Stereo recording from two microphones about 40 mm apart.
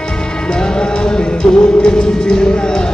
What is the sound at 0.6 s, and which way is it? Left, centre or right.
Music, left.